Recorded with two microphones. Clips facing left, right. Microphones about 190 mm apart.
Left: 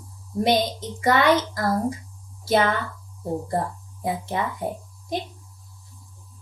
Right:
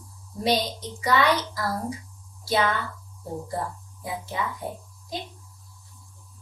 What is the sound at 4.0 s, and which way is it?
Speech, 55° left (ahead or behind).